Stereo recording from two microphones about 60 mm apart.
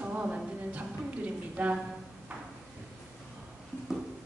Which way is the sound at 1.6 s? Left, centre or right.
Right.